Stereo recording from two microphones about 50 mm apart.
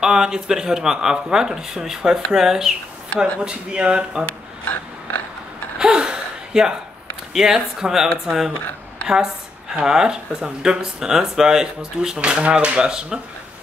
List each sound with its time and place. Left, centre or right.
0.0 s speech: centre
3.3 s speech: right
5.8 s gasp: centre
7.3 s a woman's voice: centre